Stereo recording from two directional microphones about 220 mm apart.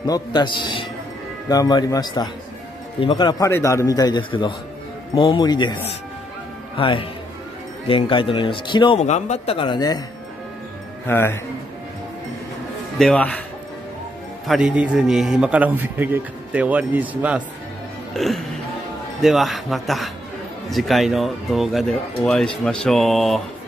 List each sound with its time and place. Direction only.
0.0 s speech: 20° left (ahead or behind)
6.8 s speech: 25° left (ahead or behind)
11.1 s speech: 10° left (ahead or behind)
13.0 s a man's voice: 5° left (ahead or behind)
14.5 s a man's voice: 5° right (ahead or behind)